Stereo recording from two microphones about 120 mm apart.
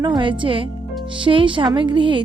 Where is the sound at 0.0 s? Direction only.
40° right (ahead or behind).